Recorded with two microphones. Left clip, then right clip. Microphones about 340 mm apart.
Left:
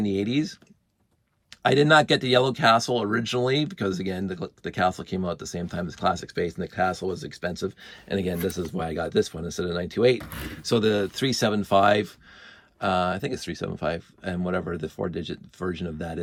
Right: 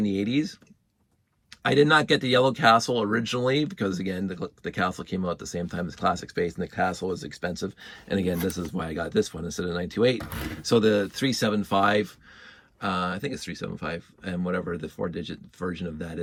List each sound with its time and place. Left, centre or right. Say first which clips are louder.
0.0 s speech: left 1 dB; centre